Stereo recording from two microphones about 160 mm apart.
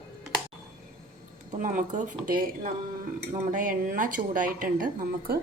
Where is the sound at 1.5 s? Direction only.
50° right (ahead or behind).